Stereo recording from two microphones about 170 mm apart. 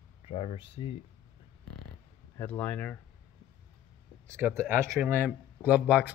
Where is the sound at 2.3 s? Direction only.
10° left (ahead or behind).